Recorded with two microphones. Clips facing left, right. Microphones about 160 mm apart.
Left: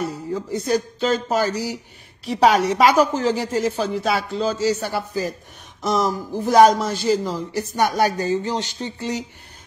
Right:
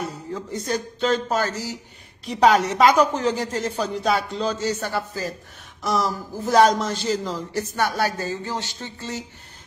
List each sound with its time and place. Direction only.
0.0 s a man's voice: 10° left (ahead or behind)